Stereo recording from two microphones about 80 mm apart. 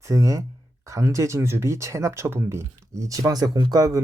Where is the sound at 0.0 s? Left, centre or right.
Right.